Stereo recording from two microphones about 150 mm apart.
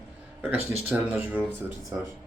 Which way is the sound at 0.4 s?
15° right (ahead or behind).